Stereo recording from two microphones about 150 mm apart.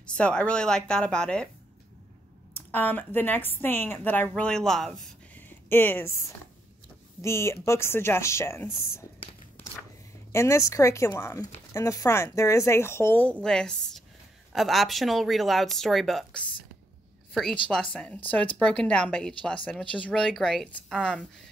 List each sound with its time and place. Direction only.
0.0 s speech: 5° left (ahead or behind)
2.5 s speech: 10° left (ahead or behind)
5.7 s speech: 15° left (ahead or behind)
7.2 s speech: 20° left (ahead or behind)
10.3 s a woman's voice: 20° left (ahead or behind)